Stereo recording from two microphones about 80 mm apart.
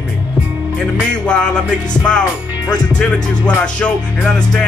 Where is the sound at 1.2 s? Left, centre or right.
Centre.